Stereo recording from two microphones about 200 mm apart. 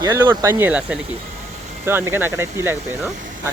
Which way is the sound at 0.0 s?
15° right (ahead or behind).